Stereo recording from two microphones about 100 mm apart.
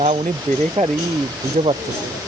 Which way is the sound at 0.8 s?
90° right.